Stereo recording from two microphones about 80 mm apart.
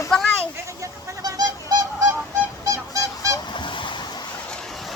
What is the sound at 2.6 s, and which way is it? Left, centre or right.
Music, right.